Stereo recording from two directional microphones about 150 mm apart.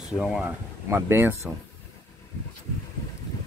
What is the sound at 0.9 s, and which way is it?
Speech, 15° right (ahead or behind).